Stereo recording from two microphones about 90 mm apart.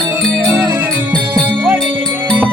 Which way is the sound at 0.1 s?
20° right (ahead or behind).